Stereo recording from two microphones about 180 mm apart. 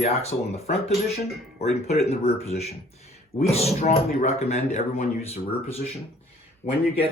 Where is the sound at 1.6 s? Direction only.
40° left (ahead or behind).